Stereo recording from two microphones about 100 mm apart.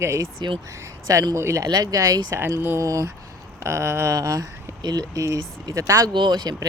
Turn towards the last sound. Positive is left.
turn(degrees=-45)  # may be behind; listen again after turning